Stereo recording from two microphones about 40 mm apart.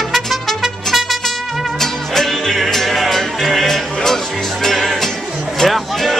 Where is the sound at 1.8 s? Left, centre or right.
Centre.